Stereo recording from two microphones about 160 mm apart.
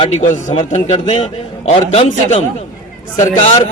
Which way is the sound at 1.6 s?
50° left (ahead or behind).